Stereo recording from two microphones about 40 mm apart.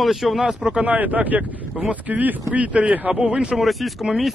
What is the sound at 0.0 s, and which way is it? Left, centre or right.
Speech, centre.